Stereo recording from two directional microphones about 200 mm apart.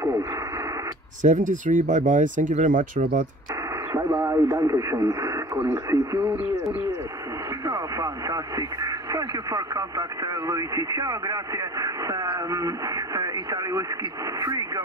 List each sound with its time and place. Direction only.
1.2 s speech: 40° right (ahead or behind)
3.9 s speech: 15° right (ahead or behind)
7.6 s speech: 15° right (ahead or behind)